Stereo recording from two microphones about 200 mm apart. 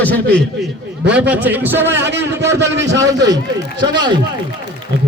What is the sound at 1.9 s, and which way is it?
A man's voice, 60° right (ahead or behind).